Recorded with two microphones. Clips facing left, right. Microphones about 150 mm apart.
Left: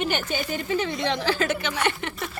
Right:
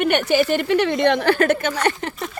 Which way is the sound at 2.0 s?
40° right (ahead or behind).